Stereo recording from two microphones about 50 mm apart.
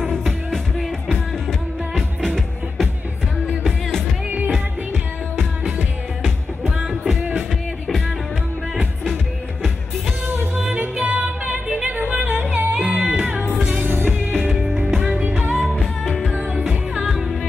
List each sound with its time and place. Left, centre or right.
0.1 s music: centre
6.8 s music: centre
10.2 s music: right
10.5 s music: centre
10.8 s music: right
12.7 s music: centre
13.7 s music: right
14.5 s music: centre
15.2 s music: right
15.8 s music: centre
16.3 s music: right
16.6 s music: centre